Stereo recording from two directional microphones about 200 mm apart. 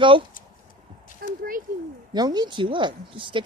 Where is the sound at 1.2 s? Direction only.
50° right (ahead or behind).